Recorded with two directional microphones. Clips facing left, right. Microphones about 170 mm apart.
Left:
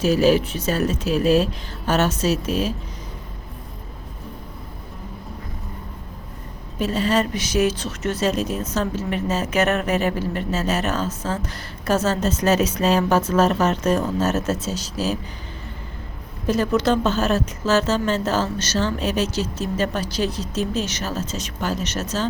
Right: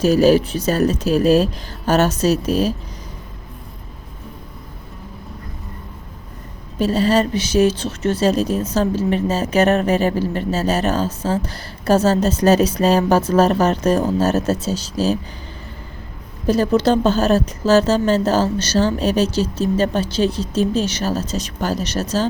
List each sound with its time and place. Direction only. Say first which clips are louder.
0.0 s a woman's voice: right 4 dB; 40° right (ahead or behind)
6.7 s a woman's voice: right 4 dB; 35° right (ahead or behind)
16.5 s a woman's voice: right 4 dB; 30° right (ahead or behind)